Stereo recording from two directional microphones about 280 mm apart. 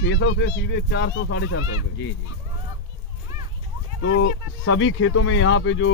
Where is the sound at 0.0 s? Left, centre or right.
Left.